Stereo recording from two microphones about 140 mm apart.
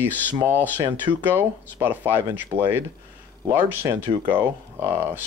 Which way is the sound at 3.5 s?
15° right (ahead or behind).